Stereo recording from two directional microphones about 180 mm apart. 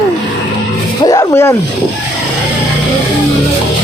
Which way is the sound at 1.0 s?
20° left (ahead or behind).